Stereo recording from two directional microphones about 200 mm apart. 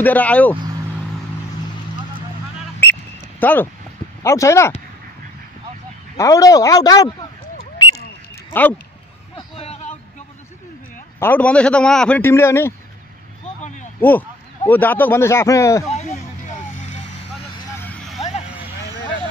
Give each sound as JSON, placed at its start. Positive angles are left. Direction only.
{"t": 0.0, "sound": "a man's voice", "side_deg": 5}
{"t": 2.8, "sound": "a sound", "side_deg": 10}
{"t": 4.2, "sound": "a man's voice", "side_deg": 15}
{"t": 6.1, "sound": "a man's voice", "side_deg": 15}
{"t": 9.6, "sound": "a sound", "side_deg": 35}
{"t": 11.1, "sound": "a man's voice", "side_deg": 10}
{"t": 13.9, "sound": "a man's voice", "side_deg": 10}
{"t": 17.7, "sound": "vehicle", "side_deg": 5}